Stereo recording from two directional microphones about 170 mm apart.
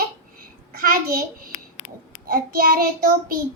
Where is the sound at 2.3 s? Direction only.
60° right (ahead or behind).